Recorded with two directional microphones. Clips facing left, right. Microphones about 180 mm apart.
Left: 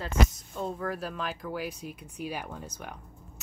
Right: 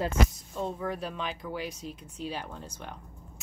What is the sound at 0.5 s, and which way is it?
Speech, centre (ahead or behind).